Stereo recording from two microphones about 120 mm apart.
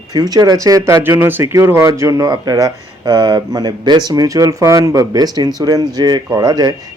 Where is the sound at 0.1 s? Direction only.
35° right (ahead or behind).